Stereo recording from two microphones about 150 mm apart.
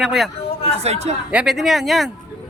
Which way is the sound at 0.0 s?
Centre (ahead or behind).